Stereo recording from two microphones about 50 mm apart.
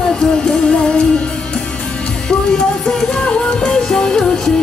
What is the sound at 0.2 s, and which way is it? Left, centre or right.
Music, centre.